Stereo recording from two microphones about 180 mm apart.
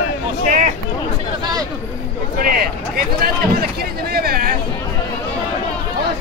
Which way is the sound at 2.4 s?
55° right (ahead or behind).